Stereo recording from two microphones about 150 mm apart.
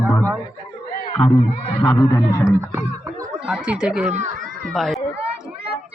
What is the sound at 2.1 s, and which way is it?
Speech, 20° left (ahead or behind).